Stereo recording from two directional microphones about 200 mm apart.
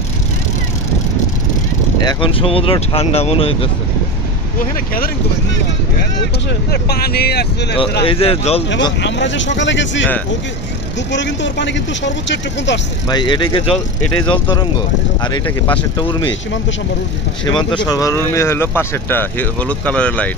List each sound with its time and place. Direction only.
2.0 s speech: 25° left (ahead or behind)
6.7 s speech: 50° left (ahead or behind)
8.0 s speech: 25° left (ahead or behind)
9.0 s speech: 65° left (ahead or behind)
11.1 s speech: 65° left (ahead or behind)
13.1 s speech: 20° left (ahead or behind)
17.8 s speech: 15° left (ahead or behind)